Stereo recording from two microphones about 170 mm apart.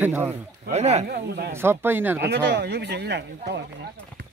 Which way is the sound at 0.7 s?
40° right (ahead or behind).